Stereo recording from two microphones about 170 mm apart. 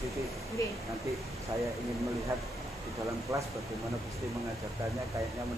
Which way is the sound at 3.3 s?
20° right (ahead or behind).